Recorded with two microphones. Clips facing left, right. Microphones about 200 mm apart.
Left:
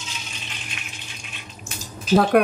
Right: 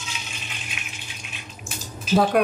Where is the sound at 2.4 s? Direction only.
60° left (ahead or behind).